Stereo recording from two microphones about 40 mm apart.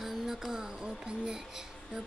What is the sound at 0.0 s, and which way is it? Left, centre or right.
Music, centre.